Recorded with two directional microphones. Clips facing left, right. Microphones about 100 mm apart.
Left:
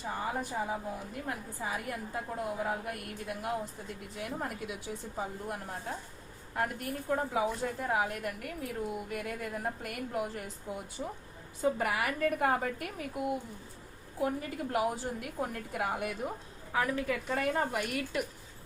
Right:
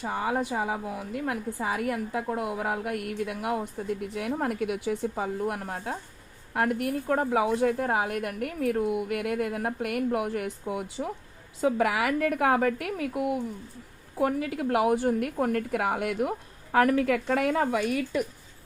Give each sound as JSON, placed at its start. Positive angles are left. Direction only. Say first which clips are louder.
{"t": 0.0, "sound": "a woman's voice", "louder": "right 7 dB", "side_deg": -90}
{"t": 11.6, "sound": "a woman's voice", "louder": "right 6 dB", "side_deg": -90}